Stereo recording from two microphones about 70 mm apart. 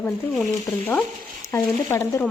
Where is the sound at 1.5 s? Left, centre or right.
Left.